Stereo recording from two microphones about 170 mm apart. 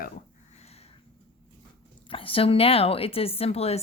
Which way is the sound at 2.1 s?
30° left (ahead or behind).